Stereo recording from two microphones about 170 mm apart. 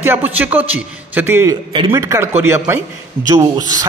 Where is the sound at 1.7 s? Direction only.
30° right (ahead or behind).